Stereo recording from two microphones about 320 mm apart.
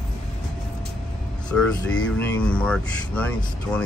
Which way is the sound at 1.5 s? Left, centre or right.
Centre.